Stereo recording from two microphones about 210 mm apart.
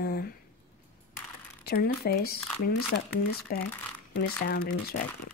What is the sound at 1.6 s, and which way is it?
Speech, 45° left (ahead or behind).